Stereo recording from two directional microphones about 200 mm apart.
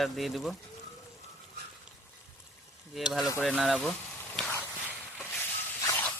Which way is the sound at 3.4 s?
Centre (ahead or behind).